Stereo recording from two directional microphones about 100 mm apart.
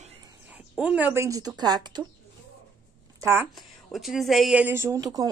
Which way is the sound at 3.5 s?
Centre (ahead or behind).